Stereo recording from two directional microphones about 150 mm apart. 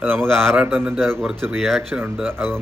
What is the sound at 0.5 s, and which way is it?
A man's voice, 15° right (ahead or behind).